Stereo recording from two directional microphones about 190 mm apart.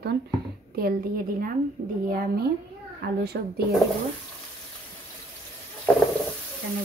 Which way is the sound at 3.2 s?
55° right (ahead or behind).